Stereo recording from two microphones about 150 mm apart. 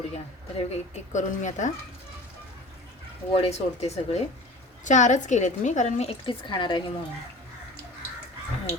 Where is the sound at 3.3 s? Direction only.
45° left (ahead or behind).